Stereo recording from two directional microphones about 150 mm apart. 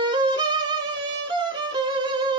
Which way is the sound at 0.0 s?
30° right (ahead or behind).